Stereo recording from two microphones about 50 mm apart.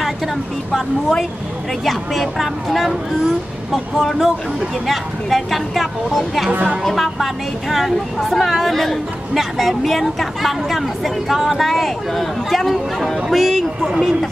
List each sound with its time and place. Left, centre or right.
0.7 s speech: centre
6.5 s a woman's voice: right
6.8 s speech: centre